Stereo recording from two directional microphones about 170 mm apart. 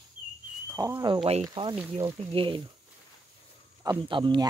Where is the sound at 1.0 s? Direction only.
30° right (ahead or behind).